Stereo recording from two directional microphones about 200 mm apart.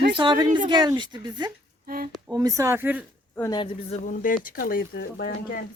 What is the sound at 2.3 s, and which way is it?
Speech, 15° right (ahead or behind).